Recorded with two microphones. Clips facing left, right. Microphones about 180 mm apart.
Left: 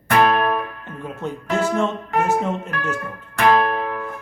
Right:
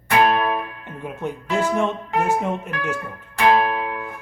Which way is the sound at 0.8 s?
15° right (ahead or behind).